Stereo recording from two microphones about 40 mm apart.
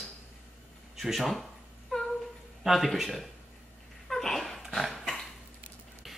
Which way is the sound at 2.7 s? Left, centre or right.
Centre.